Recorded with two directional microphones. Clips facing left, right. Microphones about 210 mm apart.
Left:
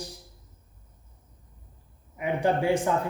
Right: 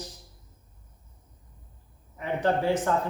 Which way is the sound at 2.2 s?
10° left (ahead or behind).